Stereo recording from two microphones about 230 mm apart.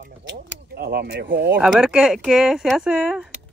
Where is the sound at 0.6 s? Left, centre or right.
Right.